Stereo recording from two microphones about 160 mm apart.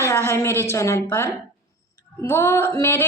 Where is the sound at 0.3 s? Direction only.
15° left (ahead or behind).